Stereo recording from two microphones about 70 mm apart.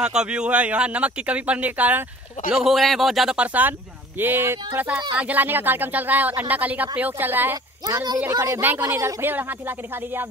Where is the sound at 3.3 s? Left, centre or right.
Right.